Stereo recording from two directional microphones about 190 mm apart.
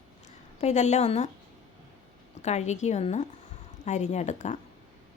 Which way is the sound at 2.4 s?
35° left (ahead or behind).